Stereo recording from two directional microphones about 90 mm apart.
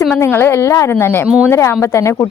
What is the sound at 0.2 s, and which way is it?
A woman's voice, 25° left (ahead or behind).